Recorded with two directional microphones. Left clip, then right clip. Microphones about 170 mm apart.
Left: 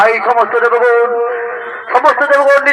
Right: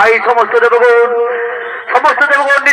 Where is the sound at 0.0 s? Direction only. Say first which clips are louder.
Right 1 dB; 25° left (ahead or behind).